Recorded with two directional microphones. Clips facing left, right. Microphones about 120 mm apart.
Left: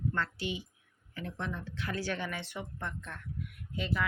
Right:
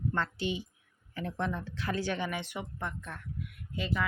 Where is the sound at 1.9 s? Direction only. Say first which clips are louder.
Right 2 dB; 20° right (ahead or behind).